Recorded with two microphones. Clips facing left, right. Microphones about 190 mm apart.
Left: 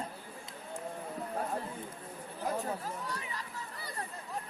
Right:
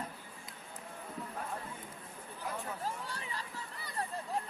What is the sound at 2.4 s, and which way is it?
Chatter, 40° left (ahead or behind).